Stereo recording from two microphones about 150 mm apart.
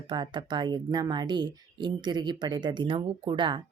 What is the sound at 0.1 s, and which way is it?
Speech, 30° right (ahead or behind).